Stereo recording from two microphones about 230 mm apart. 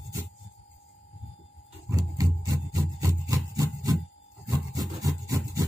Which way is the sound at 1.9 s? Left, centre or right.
Centre.